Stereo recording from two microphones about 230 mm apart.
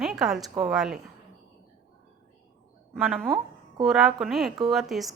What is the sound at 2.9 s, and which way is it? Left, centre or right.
A woman's voice, centre.